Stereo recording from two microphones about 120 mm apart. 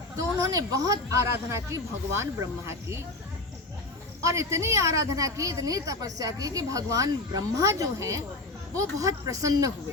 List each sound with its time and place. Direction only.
0.2 s a woman's voice: 25° right (ahead or behind)
4.2 s a woman's voice: 25° right (ahead or behind)